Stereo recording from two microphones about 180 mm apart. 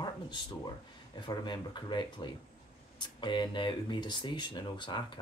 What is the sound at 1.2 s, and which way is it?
Speech, 25° left (ahead or behind).